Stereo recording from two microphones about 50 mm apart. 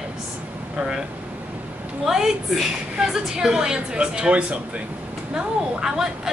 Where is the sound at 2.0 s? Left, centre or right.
Centre.